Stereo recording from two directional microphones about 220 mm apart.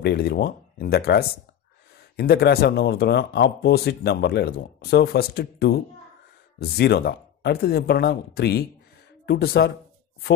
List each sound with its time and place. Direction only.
0.0 s speech: 45° left (ahead or behind)